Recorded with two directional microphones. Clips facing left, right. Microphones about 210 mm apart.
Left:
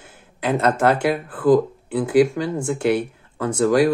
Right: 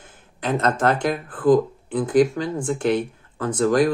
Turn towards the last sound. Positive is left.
turn(degrees=10)  # may be behind; listen again after turning